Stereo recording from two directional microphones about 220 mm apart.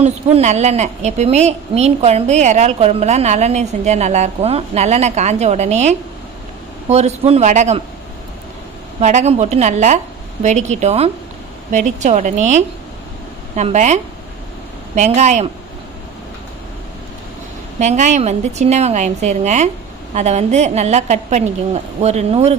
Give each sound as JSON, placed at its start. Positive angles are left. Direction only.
{"t": 0.0, "sound": "a woman's voice", "side_deg": -30}
{"t": 9.0, "sound": "a woman's voice", "side_deg": -30}
{"t": 17.7, "sound": "a woman's voice", "side_deg": -30}